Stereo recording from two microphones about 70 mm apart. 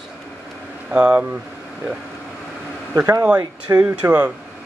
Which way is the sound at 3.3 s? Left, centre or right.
Right.